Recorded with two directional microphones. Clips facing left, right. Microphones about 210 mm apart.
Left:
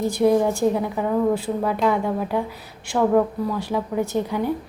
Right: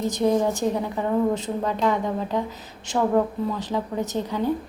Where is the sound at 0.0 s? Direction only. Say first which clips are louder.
Left 3 dB; 10° left (ahead or behind).